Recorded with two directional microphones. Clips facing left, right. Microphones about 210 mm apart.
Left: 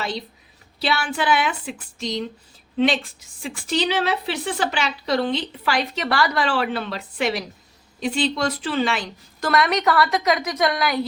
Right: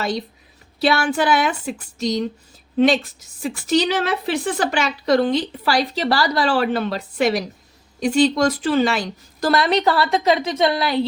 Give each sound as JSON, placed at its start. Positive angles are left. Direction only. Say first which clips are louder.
{"t": 0.8, "sound": "a woman's voice", "louder": "right 6 dB", "side_deg": -50}